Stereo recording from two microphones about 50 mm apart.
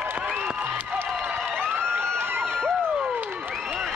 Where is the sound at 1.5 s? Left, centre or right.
Right.